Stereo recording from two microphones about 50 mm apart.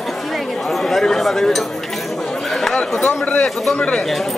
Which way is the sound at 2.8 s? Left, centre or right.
Left.